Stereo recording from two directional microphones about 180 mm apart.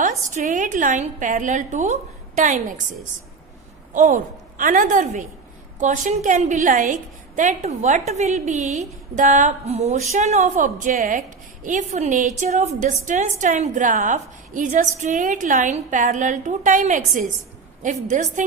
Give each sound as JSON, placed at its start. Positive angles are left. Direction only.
{"t": 0.3, "sound": "a woman's voice", "side_deg": -45}
{"t": 3.9, "sound": "a woman's voice", "side_deg": -45}